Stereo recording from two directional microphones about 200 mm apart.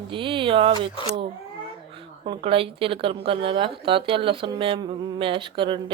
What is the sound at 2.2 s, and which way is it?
Speech, 25° right (ahead or behind).